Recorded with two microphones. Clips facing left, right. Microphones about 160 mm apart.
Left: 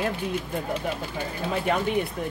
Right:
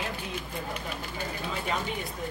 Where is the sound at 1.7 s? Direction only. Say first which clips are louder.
Left 7 dB; 60° left (ahead or behind).